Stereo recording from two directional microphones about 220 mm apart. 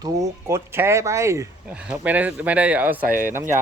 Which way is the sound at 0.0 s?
15° right (ahead or behind).